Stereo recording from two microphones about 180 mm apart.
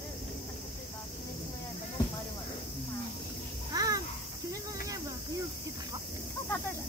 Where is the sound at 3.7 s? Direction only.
20° right (ahead or behind).